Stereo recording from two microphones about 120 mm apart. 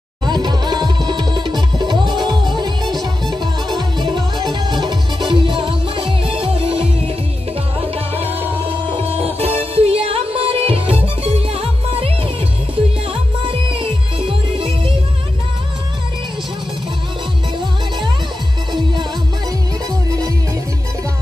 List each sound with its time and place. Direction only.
0.2 s music: 40° right (ahead or behind)
13.7 s music: 45° right (ahead or behind)